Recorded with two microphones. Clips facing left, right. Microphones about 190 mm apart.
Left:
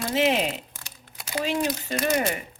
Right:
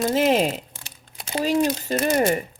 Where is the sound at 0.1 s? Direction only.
45° right (ahead or behind).